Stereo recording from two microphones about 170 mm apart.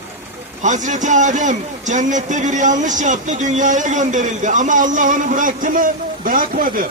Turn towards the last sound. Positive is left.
turn(degrees=-55)  # may be behind; listen again after turning